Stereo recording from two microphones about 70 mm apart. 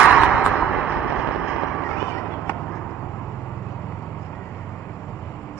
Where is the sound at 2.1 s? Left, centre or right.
Left.